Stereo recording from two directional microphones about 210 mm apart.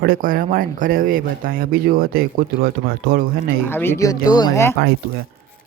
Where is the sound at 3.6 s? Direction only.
10° left (ahead or behind).